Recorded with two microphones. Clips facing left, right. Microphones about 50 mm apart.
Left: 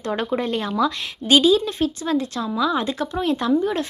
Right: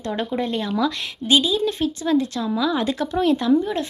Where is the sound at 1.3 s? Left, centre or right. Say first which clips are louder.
Left 3 dB; left.